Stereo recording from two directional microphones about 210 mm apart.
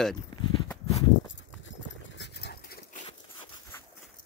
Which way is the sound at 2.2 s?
50° left (ahead or behind).